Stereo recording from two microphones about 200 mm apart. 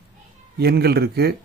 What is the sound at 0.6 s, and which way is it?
Speech, 55° right (ahead or behind).